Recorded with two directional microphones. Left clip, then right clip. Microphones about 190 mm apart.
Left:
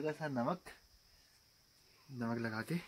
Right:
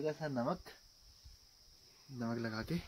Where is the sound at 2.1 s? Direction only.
5° left (ahead or behind).